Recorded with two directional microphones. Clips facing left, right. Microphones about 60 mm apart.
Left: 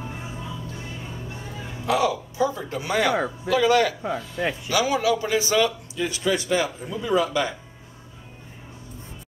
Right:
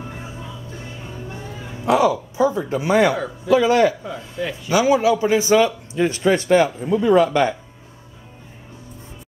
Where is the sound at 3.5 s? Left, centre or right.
Right.